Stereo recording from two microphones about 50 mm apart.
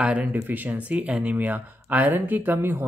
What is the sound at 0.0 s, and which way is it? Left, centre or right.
Speech, right.